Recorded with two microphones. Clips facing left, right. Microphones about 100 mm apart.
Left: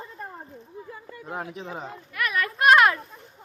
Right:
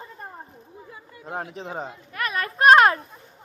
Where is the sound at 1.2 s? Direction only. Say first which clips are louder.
Right 2 dB; 30° right (ahead or behind).